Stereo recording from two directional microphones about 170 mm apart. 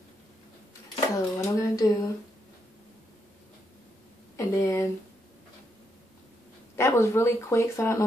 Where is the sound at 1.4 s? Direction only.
20° left (ahead or behind).